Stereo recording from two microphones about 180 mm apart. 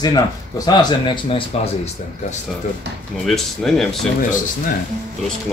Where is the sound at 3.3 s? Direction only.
Centre (ahead or behind).